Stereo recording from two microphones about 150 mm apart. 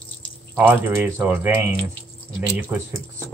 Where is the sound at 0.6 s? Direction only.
15° right (ahead or behind).